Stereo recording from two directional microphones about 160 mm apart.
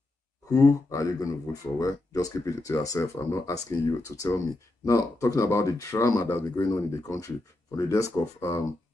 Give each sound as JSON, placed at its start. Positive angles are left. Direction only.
{"t": 0.5, "sound": "speech", "side_deg": 20}